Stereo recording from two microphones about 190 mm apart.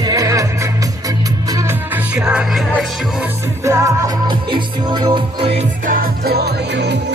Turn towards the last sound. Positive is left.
turn(degrees=-65)  # may be behind; listen again after turning